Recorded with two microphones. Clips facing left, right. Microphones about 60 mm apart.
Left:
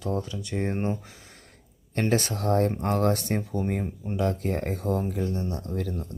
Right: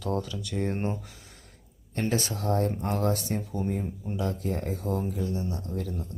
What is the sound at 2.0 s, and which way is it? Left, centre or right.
Speech, left.